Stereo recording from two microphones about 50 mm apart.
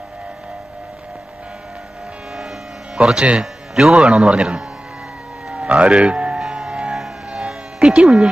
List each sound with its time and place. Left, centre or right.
3.0 s a man's voice: centre
5.5 s music: right
6.4 s a sound: centre